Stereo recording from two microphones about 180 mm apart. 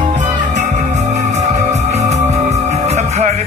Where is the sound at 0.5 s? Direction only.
40° right (ahead or behind).